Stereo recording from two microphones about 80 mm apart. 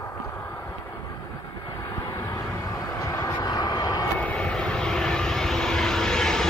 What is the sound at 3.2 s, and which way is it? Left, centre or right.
Vehicle, left.